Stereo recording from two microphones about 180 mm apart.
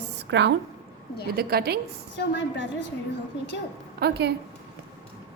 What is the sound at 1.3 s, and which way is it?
Speech, 55° right (ahead or behind).